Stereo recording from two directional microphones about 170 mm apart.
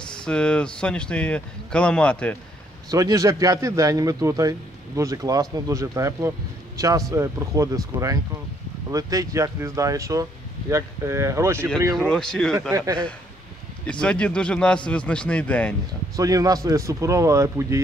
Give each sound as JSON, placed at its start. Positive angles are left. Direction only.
{"t": 0.1, "sound": "speech", "side_deg": 5}
{"t": 2.9, "sound": "a man's voice", "side_deg": -20}
{"t": 12.0, "sound": "speech", "side_deg": 5}
{"t": 13.8, "sound": "speech", "side_deg": 5}
{"t": 16.2, "sound": "a man's voice", "side_deg": -20}